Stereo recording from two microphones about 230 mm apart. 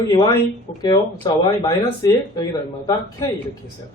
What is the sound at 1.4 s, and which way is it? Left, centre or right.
Speech, centre.